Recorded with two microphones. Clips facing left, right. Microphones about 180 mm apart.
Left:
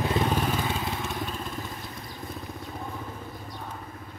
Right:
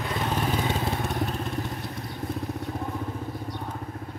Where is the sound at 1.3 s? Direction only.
65° right (ahead or behind).